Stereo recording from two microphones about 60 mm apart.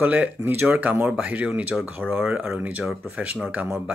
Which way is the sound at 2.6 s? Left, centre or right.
Right.